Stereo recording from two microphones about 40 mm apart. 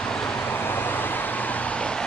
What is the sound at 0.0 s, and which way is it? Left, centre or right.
Vehicle, left.